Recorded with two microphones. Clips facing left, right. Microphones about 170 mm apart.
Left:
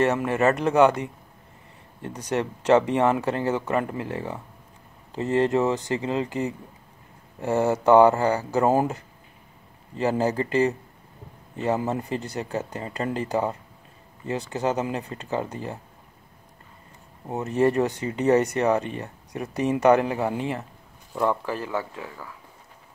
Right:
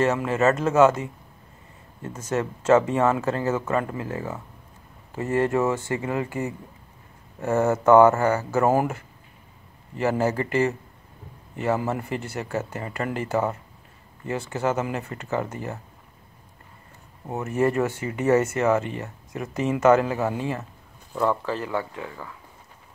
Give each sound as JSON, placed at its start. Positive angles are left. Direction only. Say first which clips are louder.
{"t": 0.0, "sound": "speech", "louder": "even", "side_deg": 20}
{"t": 2.0, "sound": "speech", "louder": "even", "side_deg": 15}
{"t": 17.3, "sound": "speech", "louder": "left 1 dB", "side_deg": 20}